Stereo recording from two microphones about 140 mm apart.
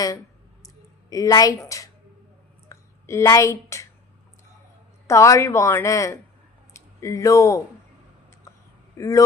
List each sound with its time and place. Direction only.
1.1 s a woman's voice: 25° left (ahead or behind)
2.6 s a sound: 20° left (ahead or behind)
3.7 s speech: 20° left (ahead or behind)
5.0 s a woman's voice: 20° left (ahead or behind)
9.0 s speech: 25° left (ahead or behind)